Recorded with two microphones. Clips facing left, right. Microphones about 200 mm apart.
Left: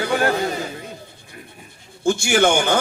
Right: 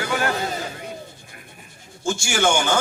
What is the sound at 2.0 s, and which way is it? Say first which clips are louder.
Speech: left 5 dB; 55° left (ahead or behind).